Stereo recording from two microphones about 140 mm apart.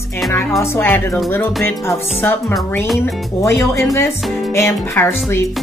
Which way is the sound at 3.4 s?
20° left (ahead or behind).